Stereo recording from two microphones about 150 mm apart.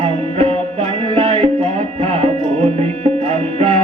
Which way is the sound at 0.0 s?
40° right (ahead or behind).